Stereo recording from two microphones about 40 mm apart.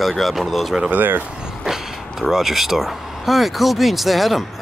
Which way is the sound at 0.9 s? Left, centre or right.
Right.